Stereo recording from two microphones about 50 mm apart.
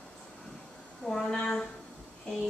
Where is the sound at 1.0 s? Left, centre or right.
Centre.